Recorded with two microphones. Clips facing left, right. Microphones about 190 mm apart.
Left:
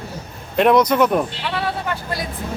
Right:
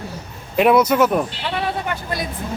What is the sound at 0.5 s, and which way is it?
Speech, 5° right (ahead or behind).